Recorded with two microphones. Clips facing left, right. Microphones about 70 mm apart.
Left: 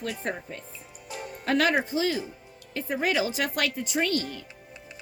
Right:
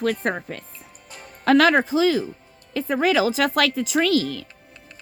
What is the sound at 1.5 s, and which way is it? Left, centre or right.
Speech, right.